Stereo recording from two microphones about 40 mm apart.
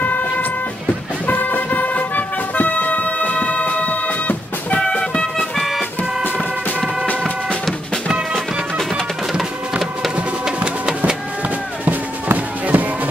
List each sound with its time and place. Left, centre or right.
0.0 s music: left
4.8 s music: left
8.3 s music: centre
9.4 s music: centre
10.4 s music: centre
11.8 s music: right